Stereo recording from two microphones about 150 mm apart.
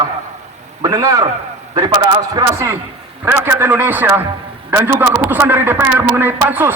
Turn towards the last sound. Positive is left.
turn(degrees=-15)  # may be behind; listen again after turning